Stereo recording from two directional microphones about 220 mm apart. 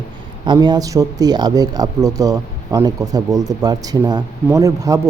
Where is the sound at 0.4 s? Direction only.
20° right (ahead or behind).